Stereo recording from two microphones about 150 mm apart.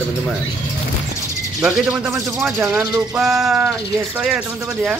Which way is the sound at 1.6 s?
5° right (ahead or behind).